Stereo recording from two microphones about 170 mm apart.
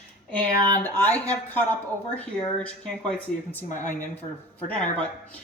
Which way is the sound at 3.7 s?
50° left (ahead or behind).